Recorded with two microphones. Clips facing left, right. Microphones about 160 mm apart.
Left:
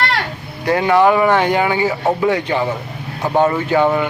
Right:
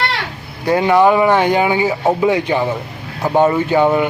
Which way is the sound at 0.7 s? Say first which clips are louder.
Right 1 dB; 15° right (ahead or behind).